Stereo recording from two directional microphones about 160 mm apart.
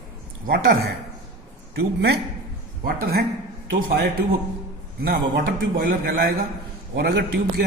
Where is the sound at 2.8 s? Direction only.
70° right (ahead or behind).